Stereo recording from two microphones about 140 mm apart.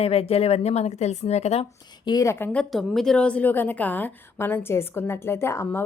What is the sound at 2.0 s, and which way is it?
A woman's voice, 25° left (ahead or behind).